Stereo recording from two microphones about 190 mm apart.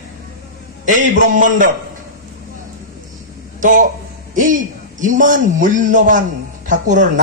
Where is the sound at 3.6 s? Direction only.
45° right (ahead or behind).